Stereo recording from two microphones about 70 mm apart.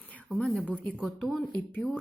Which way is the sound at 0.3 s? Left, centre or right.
Centre.